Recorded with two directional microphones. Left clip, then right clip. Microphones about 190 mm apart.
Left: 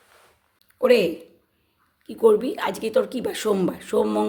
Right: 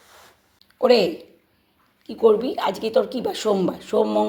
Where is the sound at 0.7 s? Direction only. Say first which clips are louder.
Right 1 dB; 10° left (ahead or behind).